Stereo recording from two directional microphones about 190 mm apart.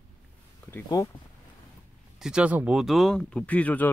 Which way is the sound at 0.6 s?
15° left (ahead or behind).